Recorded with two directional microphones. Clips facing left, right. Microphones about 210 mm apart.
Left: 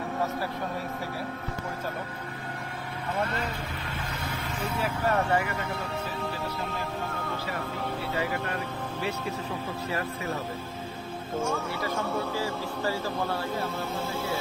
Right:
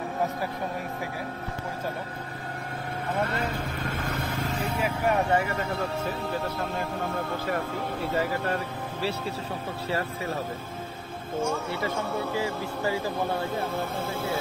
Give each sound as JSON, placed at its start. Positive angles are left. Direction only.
{"t": 3.8, "sound": "vehicle", "side_deg": -45}
{"t": 4.7, "sound": "speech", "side_deg": -15}
{"t": 11.3, "sound": "speech", "side_deg": 0}
{"t": 12.4, "sound": "speech", "side_deg": -15}